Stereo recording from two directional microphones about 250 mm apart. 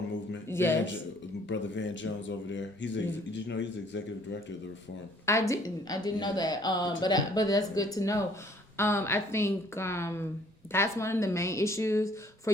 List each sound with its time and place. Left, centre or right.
0.4 s a sound: centre
1.5 s speech: left
5.2 s a woman's voice: centre